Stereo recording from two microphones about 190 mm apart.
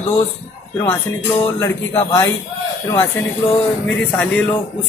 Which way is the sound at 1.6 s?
15° left (ahead or behind).